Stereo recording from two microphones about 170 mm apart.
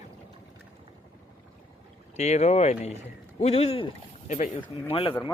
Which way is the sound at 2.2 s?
40° left (ahead or behind).